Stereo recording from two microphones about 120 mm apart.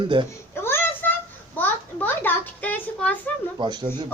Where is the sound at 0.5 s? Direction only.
20° left (ahead or behind).